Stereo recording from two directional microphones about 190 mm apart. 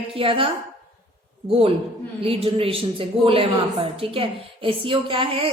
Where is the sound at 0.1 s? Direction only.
30° right (ahead or behind).